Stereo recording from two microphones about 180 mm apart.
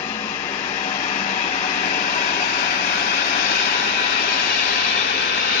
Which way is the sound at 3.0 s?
45° left (ahead or behind).